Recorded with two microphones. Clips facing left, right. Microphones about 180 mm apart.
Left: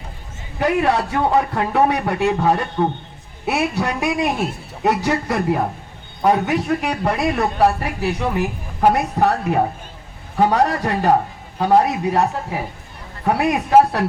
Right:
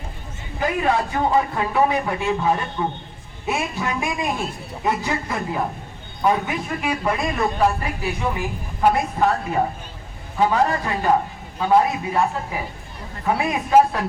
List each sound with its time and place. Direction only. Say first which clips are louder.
0.6 s a man's voice: left 3 dB; 65° left (ahead or behind)